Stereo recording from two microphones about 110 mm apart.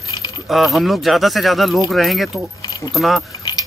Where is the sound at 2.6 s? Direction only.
40° left (ahead or behind).